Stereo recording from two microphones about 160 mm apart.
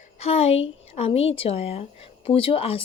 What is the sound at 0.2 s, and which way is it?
Speech, 40° left (ahead or behind).